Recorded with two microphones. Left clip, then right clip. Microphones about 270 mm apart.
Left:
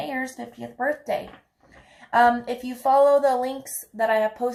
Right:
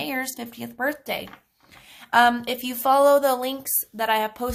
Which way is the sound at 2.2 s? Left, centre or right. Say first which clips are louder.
Even; right.